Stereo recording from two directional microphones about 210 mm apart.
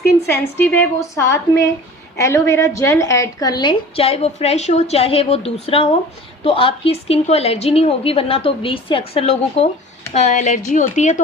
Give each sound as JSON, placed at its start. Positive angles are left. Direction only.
{"t": 0.3, "sound": "a woman's voice", "side_deg": 10}